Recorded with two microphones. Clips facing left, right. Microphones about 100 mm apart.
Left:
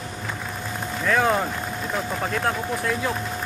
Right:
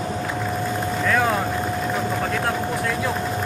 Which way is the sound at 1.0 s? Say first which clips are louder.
Even; centre (ahead or behind).